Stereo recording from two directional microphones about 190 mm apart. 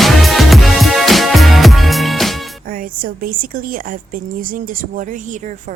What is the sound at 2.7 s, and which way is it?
A woman's voice, 50° right (ahead or behind).